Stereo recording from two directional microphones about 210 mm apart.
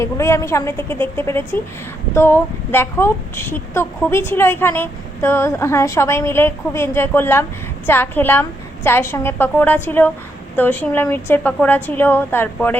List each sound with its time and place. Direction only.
0.0 s speech: 15° left (ahead or behind)